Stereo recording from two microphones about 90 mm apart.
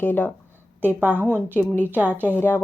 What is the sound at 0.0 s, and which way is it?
Speech, 20° left (ahead or behind).